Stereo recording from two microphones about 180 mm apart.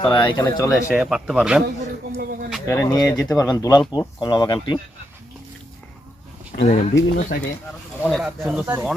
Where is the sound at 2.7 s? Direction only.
15° left (ahead or behind).